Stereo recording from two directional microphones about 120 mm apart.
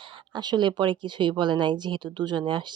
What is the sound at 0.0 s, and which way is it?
Speech, 45° right (ahead or behind).